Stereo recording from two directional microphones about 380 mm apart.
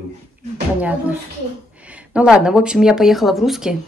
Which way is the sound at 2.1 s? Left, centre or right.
Centre.